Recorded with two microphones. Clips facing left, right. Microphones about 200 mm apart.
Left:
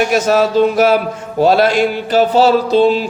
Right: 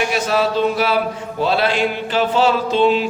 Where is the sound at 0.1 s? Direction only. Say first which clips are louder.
Left 6 dB; 45° left (ahead or behind).